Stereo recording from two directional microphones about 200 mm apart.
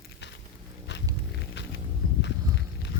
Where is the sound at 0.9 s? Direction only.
60° left (ahead or behind).